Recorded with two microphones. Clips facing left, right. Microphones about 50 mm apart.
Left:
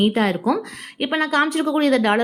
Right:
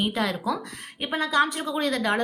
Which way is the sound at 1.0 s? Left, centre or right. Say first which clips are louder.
Left 4 dB; left.